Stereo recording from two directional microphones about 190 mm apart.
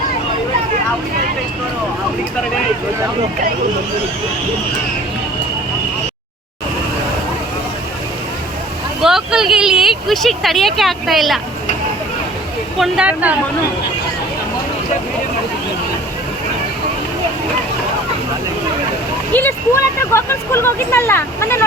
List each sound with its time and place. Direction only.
9.0 s speech: centre (ahead or behind)
12.8 s speech: 5° right (ahead or behind)
19.3 s speech: 10° left (ahead or behind)